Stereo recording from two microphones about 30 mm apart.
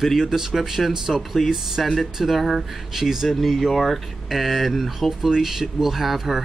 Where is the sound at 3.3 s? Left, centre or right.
Centre.